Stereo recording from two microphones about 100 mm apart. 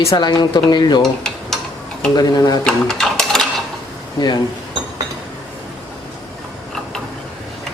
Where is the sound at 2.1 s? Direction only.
45° left (ahead or behind).